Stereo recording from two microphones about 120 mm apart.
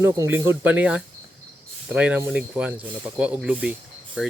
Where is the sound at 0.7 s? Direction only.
10° right (ahead or behind).